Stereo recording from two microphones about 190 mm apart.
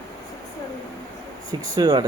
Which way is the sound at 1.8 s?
20° right (ahead or behind).